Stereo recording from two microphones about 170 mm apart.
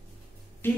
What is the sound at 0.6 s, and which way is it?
Speech, 15° left (ahead or behind).